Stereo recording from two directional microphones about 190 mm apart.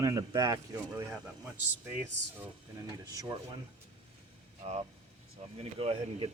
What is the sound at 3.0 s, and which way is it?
Speech, 20° right (ahead or behind).